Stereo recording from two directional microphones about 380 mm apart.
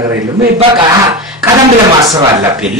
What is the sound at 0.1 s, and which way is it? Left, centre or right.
A man's voice, centre.